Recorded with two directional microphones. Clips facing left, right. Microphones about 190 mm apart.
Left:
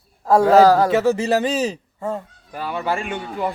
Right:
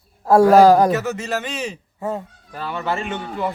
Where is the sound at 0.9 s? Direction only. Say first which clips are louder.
Left 5 dB; 30° left (ahead or behind).